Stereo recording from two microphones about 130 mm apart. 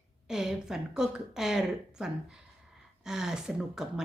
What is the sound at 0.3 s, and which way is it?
Speech, 5° right (ahead or behind).